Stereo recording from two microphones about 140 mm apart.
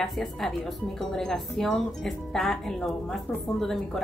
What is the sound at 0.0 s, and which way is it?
Speech, centre (ahead or behind).